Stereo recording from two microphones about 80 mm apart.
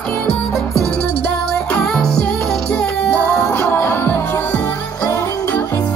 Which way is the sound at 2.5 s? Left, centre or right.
Centre.